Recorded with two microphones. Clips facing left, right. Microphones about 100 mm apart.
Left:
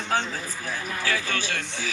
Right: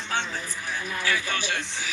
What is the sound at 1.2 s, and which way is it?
Speech, 15° right (ahead or behind).